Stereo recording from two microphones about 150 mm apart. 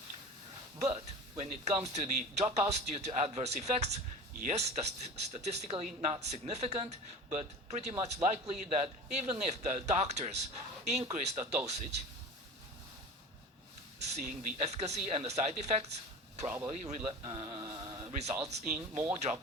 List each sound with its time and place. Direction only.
1.4 s a man's voice: 50° right (ahead or behind)
14.2 s speech: 55° right (ahead or behind)
17.1 s speech: 35° right (ahead or behind)
18.1 s speech: 50° right (ahead or behind)
18.7 s speech: 10° right (ahead or behind)
19.1 s speech: 50° right (ahead or behind)